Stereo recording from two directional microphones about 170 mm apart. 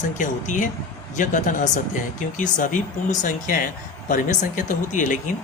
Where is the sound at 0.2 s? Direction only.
50° left (ahead or behind).